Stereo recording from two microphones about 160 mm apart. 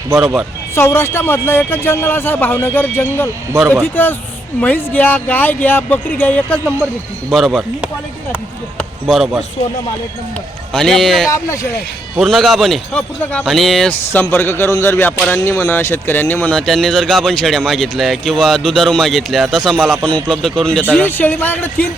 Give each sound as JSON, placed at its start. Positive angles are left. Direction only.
{"t": 0.1, "sound": "speech", "side_deg": -20}
{"t": 0.8, "sound": "speech", "side_deg": 15}
{"t": 10.7, "sound": "speech", "side_deg": 5}
{"t": 11.3, "sound": "speech", "side_deg": 20}
{"t": 12.1, "sound": "speech", "side_deg": 0}